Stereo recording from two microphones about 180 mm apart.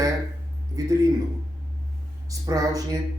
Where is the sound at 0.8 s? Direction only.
20° right (ahead or behind).